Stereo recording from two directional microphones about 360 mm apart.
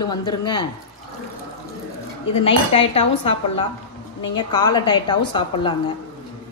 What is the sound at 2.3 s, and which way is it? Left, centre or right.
A woman's voice, centre.